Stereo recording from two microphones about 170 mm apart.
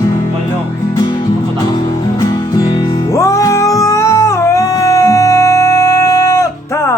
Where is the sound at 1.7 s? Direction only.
20° left (ahead or behind).